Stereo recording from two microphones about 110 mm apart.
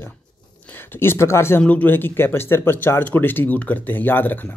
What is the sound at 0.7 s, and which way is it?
Speech, 20° left (ahead or behind).